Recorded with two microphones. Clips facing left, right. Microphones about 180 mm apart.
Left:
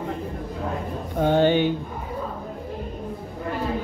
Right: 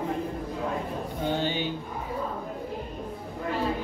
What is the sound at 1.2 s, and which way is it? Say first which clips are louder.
Music: left 11 dB; 55° left (ahead or behind).